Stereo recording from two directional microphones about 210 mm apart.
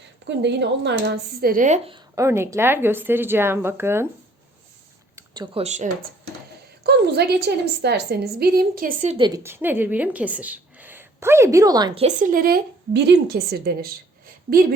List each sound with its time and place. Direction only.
0.3 s a woman's voice: 55° right (ahead or behind); by 1.8 s 40° right (ahead or behind)
1.9 s speech: 15° right (ahead or behind)
5.1 s a sound: 20° right (ahead or behind)
5.6 s speech: 35° right (ahead or behind)
6.8 s a woman's voice: 50° right (ahead or behind)
9.1 s speech: 20° right (ahead or behind)
12.0 s a woman's voice: 40° right (ahead or behind)